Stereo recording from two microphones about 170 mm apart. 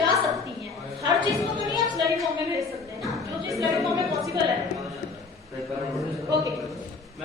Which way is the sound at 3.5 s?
20° right (ahead or behind).